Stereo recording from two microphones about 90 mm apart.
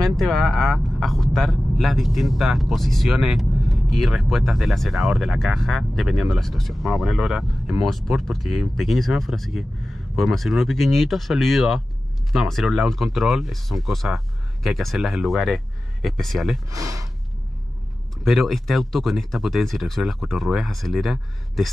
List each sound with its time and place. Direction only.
0.2 s speech: centre (ahead or behind)
16.7 s speech: 40° right (ahead or behind)
18.2 s speech: centre (ahead or behind)